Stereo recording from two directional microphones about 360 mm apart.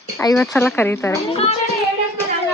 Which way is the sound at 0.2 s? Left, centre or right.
Centre.